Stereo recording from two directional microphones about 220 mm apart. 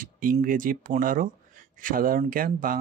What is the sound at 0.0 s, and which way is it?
Speech, 40° right (ahead or behind).